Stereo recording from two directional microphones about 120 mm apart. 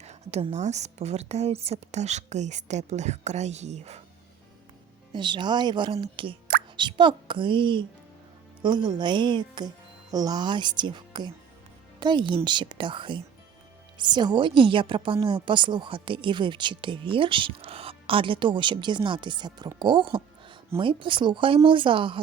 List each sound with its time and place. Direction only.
0.0 s a sound: 65° right (ahead or behind)
0.5 s speech: 70° right (ahead or behind)
5.1 s speech: 40° right (ahead or behind)